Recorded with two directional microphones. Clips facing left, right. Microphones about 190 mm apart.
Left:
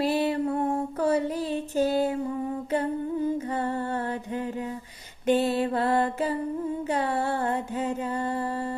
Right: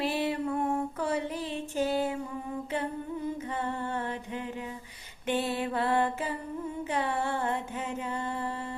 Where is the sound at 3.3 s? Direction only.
40° left (ahead or behind).